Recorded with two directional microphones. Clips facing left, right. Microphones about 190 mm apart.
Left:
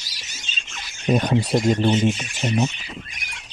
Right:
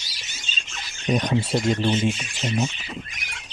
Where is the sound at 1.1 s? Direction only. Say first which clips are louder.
Left 3 dB; 50° left (ahead or behind).